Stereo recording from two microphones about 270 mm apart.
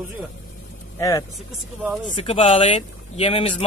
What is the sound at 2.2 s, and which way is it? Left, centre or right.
Speech, left.